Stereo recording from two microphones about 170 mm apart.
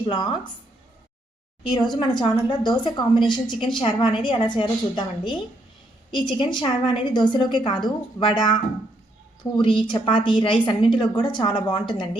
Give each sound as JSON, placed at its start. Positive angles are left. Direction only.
{"t": 0.0, "sound": "a woman's voice", "side_deg": 25}
{"t": 1.8, "sound": "a woman's voice", "side_deg": 25}